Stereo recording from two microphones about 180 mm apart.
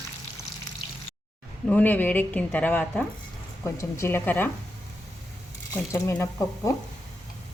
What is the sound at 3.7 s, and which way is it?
Speech, 15° left (ahead or behind).